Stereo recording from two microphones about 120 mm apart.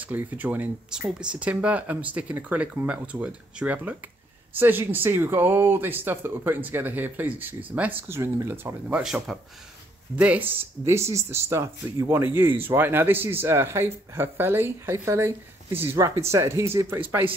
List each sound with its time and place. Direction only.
0.0 s speech: 15° right (ahead or behind)
9.0 s speech: centre (ahead or behind); by 17.3 s 20° right (ahead or behind)